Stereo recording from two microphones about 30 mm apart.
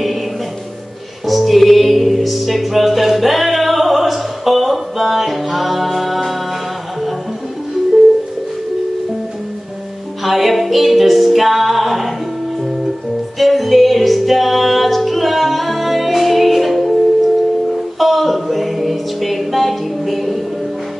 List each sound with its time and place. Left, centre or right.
1.2 s music: centre
10.2 s music: centre
13.4 s music: centre